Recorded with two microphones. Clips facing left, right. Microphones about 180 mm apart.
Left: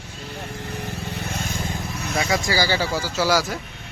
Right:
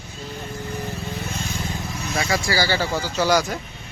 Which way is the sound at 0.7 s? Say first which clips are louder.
Right 2 dB; 70° left (ahead or behind).